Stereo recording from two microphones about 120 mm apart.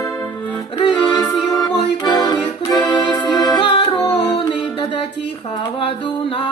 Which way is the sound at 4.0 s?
25° left (ahead or behind).